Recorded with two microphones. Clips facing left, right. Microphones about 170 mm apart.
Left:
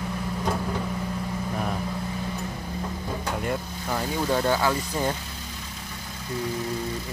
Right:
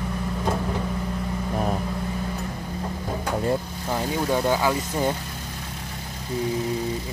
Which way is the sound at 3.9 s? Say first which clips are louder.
Right 2 dB; 15° right (ahead or behind).